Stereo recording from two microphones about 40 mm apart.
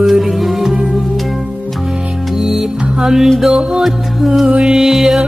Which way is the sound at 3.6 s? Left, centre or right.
Right.